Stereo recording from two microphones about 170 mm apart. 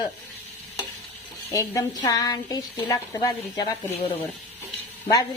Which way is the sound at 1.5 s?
20° left (ahead or behind).